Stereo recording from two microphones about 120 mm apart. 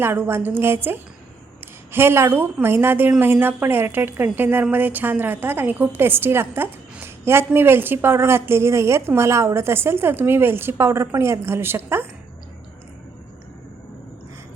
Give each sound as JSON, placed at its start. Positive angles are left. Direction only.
{"t": 0.0, "sound": "a woman's voice", "side_deg": -20}